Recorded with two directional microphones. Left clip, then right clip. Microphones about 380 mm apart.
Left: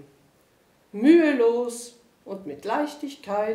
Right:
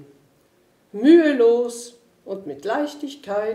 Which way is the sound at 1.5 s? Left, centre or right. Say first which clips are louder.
Right 6 dB; centre.